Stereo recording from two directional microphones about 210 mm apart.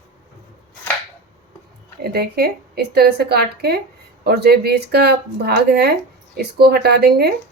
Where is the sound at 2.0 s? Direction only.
50° right (ahead or behind).